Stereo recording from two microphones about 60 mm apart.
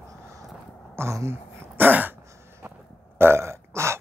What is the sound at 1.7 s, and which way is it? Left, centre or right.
Throat clearing, right.